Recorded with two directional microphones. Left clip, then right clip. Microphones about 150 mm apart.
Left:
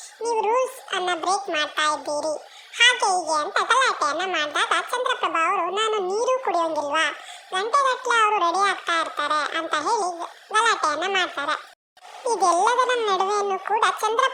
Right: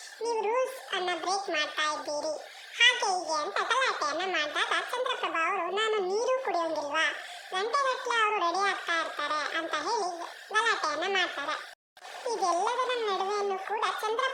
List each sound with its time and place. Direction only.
0.2 s speech: 35° left (ahead or behind)
10.9 s speech: 20° left (ahead or behind)
11.2 s speech: 35° left (ahead or behind)
12.2 s a child's voice: 45° left (ahead or behind)